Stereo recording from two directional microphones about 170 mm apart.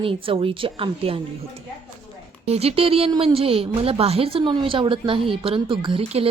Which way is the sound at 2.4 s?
35° right (ahead or behind).